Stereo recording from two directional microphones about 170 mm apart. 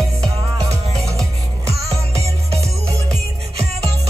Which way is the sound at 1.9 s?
35° right (ahead or behind).